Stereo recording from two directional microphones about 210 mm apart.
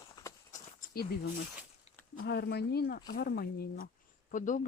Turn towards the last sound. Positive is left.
turn(degrees=40)  # may be behind; listen again after turning